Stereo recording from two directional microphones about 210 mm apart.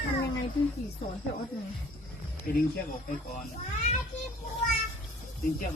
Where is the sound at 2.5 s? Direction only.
45° left (ahead or behind).